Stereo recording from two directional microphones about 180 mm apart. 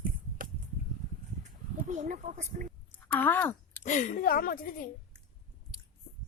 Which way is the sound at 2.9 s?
10° left (ahead or behind).